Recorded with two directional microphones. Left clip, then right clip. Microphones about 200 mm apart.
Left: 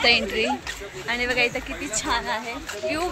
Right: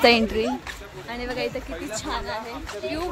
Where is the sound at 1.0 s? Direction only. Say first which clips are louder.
Left 6 dB; 10° left (ahead or behind).